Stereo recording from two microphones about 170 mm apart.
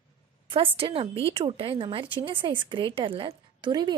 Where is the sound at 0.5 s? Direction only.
30° right (ahead or behind).